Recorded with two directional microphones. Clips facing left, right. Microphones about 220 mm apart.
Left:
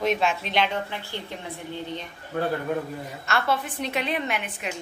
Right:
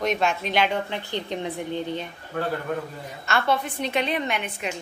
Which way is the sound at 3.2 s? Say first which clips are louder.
Right 2 dB; centre (ahead or behind).